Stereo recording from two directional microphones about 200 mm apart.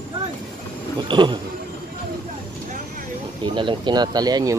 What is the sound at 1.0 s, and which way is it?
Speech, 25° right (ahead or behind).